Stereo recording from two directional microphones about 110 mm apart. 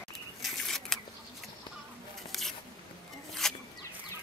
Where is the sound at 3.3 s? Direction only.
5° left (ahead or behind).